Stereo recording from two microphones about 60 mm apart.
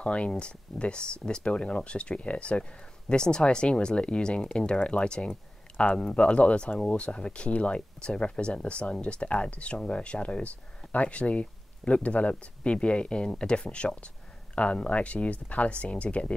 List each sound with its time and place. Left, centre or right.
0.0 s speech: centre